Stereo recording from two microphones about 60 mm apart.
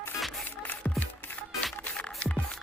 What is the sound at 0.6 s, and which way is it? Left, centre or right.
Music, left.